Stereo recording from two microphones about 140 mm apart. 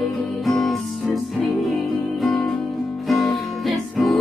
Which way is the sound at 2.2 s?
Centre (ahead or behind).